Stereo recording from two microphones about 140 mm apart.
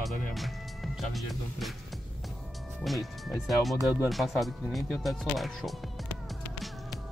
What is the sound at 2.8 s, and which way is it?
Speech, centre (ahead or behind).